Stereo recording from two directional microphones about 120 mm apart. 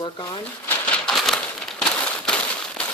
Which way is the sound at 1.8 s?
5° left (ahead or behind).